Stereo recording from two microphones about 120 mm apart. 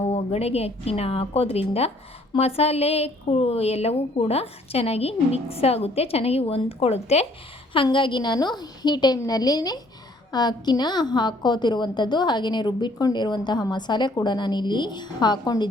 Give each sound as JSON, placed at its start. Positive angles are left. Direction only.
{"t": 0.1, "sound": "a woman's voice", "side_deg": 60}
{"t": 7.7, "sound": "a woman's voice", "side_deg": 45}